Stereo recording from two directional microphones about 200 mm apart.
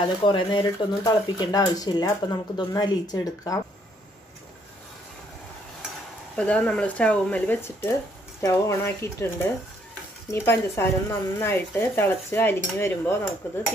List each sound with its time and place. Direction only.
0.0 s speech: 25° left (ahead or behind)
6.3 s speech: 5° left (ahead or behind)